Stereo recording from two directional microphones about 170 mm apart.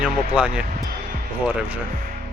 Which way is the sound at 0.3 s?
5° right (ahead or behind).